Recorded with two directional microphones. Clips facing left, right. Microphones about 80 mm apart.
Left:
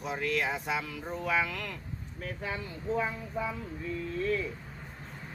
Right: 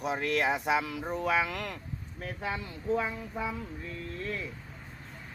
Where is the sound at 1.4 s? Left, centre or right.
Right.